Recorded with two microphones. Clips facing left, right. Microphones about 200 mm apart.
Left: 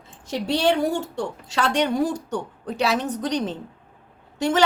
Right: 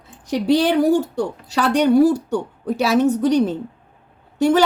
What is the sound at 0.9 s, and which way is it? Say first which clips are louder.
Speech: right 8 dB; 25° left (ahead or behind).